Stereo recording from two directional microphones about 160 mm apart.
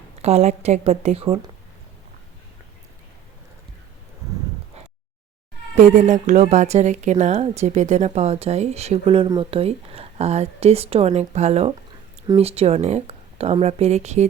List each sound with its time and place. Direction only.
0.2 s speech: 40° right (ahead or behind)
5.7 s speech: 50° right (ahead or behind)